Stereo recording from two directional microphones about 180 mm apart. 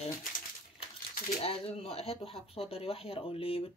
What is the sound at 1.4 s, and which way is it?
Speech, 35° left (ahead or behind).